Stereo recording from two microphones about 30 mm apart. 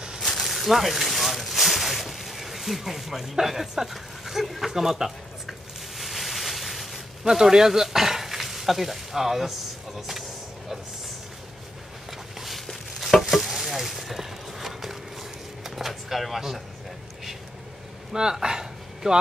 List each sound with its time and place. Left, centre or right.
0.2 s a sound: centre
7.2 s speech: centre
9.9 s vehicle: centre
12.1 s a sound: centre
13.0 s sizzle: centre
15.6 s vehicle: centre
18.1 s speech: right